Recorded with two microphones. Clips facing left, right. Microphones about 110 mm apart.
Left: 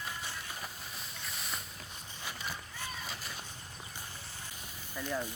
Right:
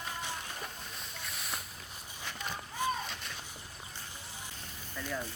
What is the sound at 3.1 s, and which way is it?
Splash, 5° left (ahead or behind).